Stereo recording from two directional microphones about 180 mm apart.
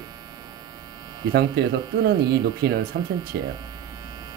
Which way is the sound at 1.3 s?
65° right (ahead or behind).